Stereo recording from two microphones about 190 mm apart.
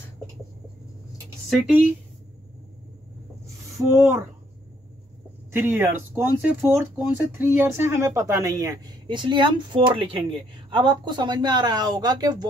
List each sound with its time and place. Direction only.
1.5 s speech: 5° right (ahead or behind)
3.9 s speech: 15° right (ahead or behind)
5.5 s speech: 10° right (ahead or behind)